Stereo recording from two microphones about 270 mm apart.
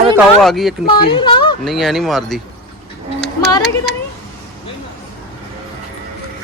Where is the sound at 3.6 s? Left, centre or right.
Centre.